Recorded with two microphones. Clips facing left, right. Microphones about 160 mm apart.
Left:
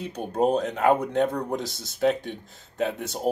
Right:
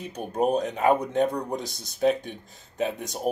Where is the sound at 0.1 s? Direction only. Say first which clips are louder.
Left 1 dB; 10° right (ahead or behind).